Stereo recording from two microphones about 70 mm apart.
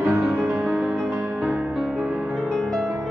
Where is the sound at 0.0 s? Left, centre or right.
Right.